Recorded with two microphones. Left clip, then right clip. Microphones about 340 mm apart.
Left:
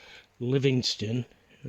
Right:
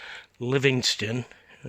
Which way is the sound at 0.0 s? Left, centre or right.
Centre.